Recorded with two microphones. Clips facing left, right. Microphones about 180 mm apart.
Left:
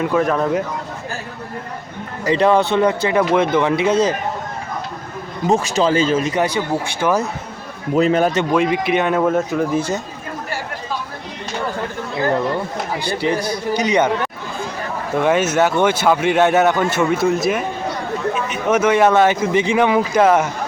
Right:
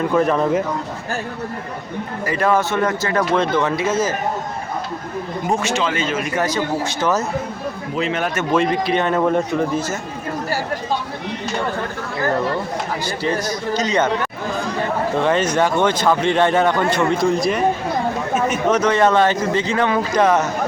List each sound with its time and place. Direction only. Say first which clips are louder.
0.0 s speech: even; centre (ahead or behind)
2.2 s speech: left 4 dB; 20° left (ahead or behind)
5.6 s speech: left 5 dB; 35° left (ahead or behind)
7.0 s speech: left 2 dB; 10° left (ahead or behind)
7.9 s speech: left 8 dB; 40° left (ahead or behind)
8.5 s speech: right 3 dB; 10° left (ahead or behind)
13.2 s speech: left 2 dB; 15° left (ahead or behind)
15.2 s speech: left 3 dB; 10° left (ahead or behind)
18.3 s a sound: right 4 dB; 45° right (ahead or behind)
18.7 s speech: left 3 dB; 10° left (ahead or behind)